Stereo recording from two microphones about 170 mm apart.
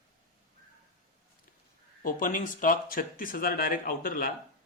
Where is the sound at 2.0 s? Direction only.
50° left (ahead or behind).